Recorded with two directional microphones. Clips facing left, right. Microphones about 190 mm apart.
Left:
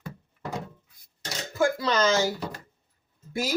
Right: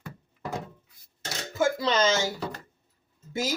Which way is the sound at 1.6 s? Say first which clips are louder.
Even; 25° right (ahead or behind).